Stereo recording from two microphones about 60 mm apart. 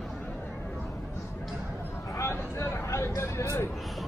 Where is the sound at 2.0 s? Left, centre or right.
Left.